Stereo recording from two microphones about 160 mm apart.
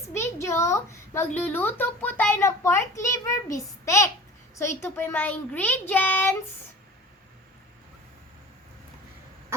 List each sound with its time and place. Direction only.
0.1 s a child's voice: 15° left (ahead or behind)